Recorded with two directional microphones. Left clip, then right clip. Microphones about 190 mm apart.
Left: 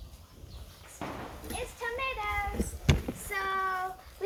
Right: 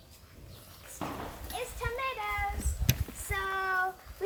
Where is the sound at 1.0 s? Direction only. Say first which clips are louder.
Right 1 dB; 50° right (ahead or behind).